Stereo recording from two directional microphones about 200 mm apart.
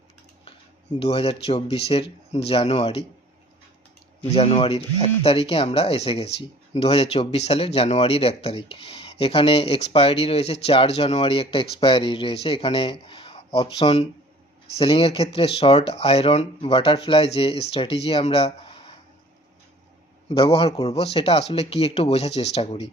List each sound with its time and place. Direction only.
0.9 s speech: 30° left (ahead or behind)
4.2 s speech: 30° left (ahead or behind)
20.2 s speech: 30° left (ahead or behind)